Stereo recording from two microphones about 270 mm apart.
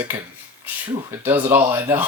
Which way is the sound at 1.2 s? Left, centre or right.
Centre.